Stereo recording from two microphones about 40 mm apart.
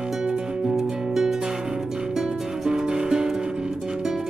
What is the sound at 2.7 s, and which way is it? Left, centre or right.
Music, centre.